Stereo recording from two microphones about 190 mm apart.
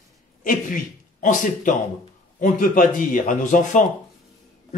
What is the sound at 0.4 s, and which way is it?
A man's voice, 45° left (ahead or behind).